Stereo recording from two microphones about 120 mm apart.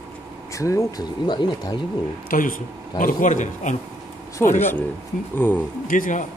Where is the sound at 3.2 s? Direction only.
90° left.